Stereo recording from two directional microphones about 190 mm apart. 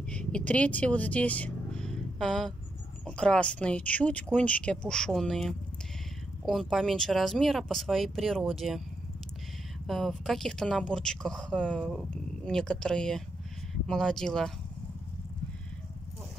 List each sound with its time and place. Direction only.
0.1 s speech: 5° left (ahead or behind)
9.8 s speech: centre (ahead or behind)